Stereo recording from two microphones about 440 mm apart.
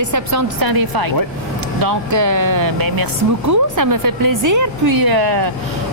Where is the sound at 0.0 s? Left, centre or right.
Right.